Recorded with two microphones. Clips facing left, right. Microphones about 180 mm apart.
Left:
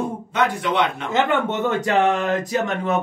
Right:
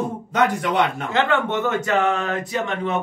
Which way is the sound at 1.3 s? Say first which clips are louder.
Even; 25° left (ahead or behind).